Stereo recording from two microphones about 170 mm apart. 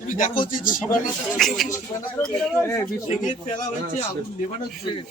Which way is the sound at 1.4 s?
Centre (ahead or behind).